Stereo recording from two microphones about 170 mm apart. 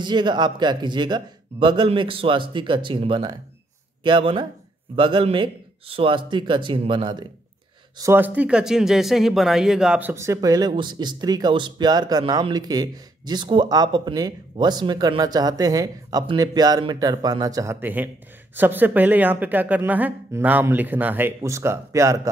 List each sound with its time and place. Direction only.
0.0 s speech: 25° right (ahead or behind)
8.0 s speech: 15° right (ahead or behind)